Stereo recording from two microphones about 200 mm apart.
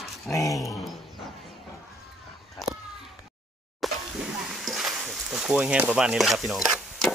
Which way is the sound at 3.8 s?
Centre (ahead or behind).